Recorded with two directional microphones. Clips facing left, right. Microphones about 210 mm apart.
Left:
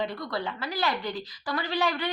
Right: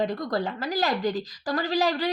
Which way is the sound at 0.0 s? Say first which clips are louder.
Right 5 dB; 45° right (ahead or behind).